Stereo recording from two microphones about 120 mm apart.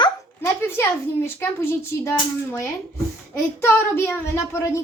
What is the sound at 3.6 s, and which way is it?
Speech, 20° left (ahead or behind).